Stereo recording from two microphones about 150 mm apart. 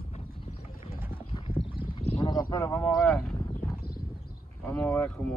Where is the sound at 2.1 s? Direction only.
30° left (ahead or behind).